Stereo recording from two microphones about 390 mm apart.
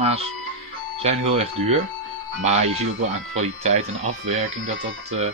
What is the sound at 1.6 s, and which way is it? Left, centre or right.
Speech, centre.